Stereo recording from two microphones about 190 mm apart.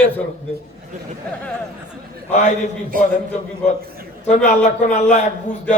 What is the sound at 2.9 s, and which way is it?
Speech, 45° right (ahead or behind).